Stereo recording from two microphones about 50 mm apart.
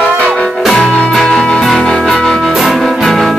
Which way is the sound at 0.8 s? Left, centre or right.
Centre.